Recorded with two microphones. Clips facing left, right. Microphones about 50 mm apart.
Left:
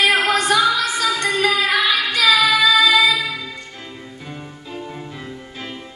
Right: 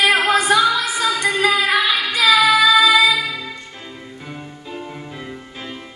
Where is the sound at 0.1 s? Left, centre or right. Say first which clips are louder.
Right 1 dB; right.